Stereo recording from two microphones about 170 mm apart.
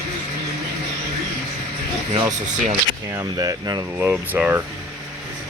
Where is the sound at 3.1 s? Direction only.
20° right (ahead or behind).